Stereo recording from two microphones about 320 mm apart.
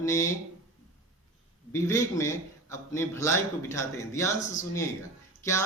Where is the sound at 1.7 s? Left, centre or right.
Centre.